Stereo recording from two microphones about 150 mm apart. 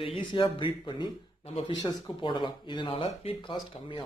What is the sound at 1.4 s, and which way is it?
Speech, 45° left (ahead or behind).